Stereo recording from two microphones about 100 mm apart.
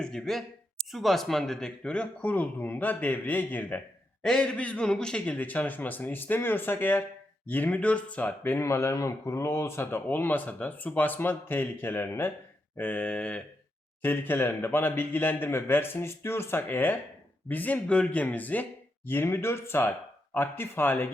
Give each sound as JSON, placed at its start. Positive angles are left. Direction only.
{"t": 0.0, "sound": "speech", "side_deg": 5}
{"t": 14.0, "sound": "speech", "side_deg": 20}